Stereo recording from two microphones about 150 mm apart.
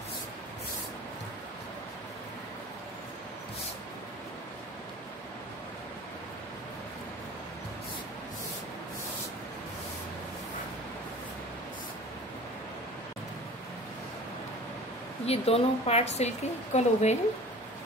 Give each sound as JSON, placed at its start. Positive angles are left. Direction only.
{"t": 15.2, "sound": "a woman's voice", "side_deg": 45}